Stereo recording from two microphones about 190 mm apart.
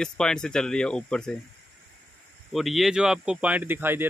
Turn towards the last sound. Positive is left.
turn(degrees=-10)  # may be behind; listen again after turning